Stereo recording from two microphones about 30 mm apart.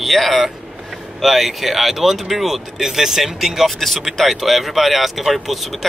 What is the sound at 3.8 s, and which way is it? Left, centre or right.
Speech, centre.